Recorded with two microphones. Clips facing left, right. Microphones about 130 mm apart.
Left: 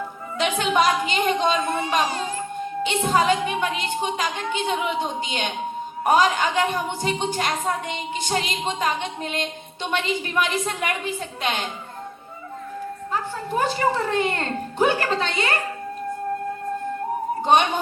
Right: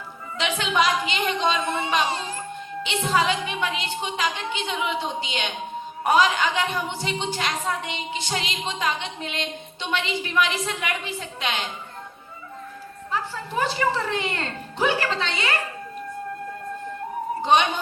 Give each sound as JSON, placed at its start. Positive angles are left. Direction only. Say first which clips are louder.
{"t": 0.3, "sound": "a woman's voice", "louder": "left 3 dB", "side_deg": 50}
{"t": 1.7, "sound": "speech", "louder": "left 1 dB", "side_deg": -25}
{"t": 2.6, "sound": "a woman's voice", "louder": "left 6 dB", "side_deg": 45}
{"t": 13.1, "sound": "a woman's voice", "louder": "left 1 dB", "side_deg": 45}
{"t": 17.4, "sound": "speech", "louder": "left 1 dB", "side_deg": 50}